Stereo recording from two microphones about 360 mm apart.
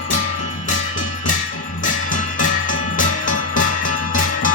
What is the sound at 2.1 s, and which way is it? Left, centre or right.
Music, left.